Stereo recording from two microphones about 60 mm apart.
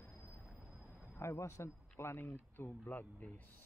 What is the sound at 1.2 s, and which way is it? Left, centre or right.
A man's voice, left.